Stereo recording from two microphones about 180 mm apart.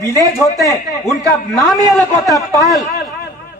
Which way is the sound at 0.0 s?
15° left (ahead or behind).